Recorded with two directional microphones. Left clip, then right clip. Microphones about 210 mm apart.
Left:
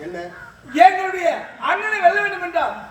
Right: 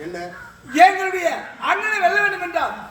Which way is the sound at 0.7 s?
15° right (ahead or behind).